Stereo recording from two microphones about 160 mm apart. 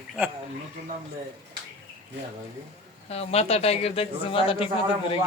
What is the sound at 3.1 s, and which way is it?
Speech, 40° left (ahead or behind).